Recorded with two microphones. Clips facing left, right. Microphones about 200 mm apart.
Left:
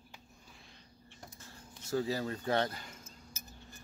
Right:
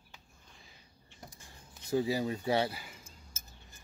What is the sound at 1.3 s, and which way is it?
Speech, 15° right (ahead or behind).